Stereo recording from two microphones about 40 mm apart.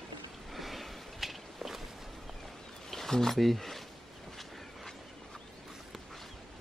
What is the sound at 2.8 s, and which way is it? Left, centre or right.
Speech, centre.